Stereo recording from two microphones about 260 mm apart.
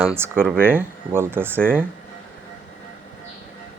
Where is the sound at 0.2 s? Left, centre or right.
Centre.